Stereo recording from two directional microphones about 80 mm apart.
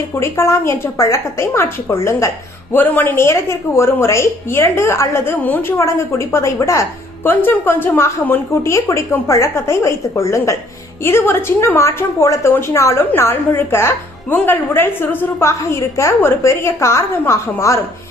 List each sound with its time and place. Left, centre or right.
0.1 s a woman's voice: left
2.7 s a woman's voice: left
7.3 s a woman's voice: left